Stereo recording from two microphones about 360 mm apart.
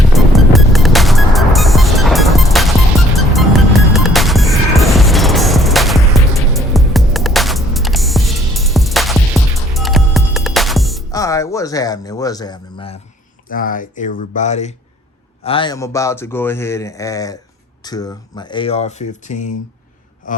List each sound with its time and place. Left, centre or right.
0.1 s music: centre
13.5 s speech: left